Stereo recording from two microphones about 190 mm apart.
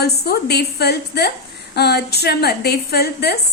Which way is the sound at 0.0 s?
60° left (ahead or behind).